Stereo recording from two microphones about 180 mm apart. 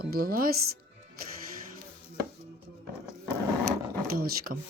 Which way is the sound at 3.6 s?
55° right (ahead or behind).